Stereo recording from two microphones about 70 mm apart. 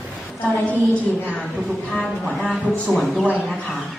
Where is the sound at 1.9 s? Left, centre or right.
Centre.